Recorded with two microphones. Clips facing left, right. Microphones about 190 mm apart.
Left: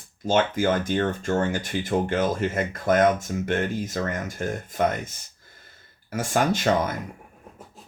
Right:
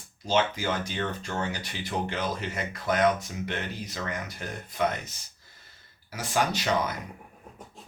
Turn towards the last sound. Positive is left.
turn(degrees=50)  # may be behind; listen again after turning